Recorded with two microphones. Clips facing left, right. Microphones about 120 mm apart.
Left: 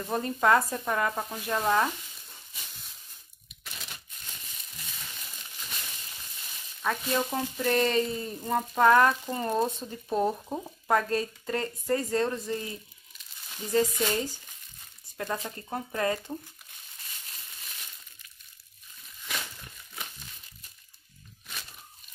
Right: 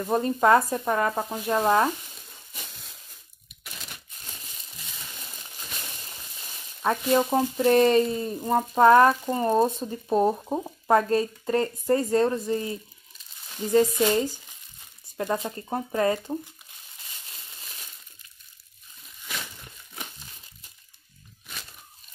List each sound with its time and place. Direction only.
0.0 s speech: 20° right (ahead or behind)
4.2 s crumpling: 35° right (ahead or behind)
5.6 s frying: 30° right (ahead or behind)
8.1 s speech: 25° right (ahead or behind)
15.3 s speech: 25° right (ahead or behind)
17.6 s a sound: 30° right (ahead or behind)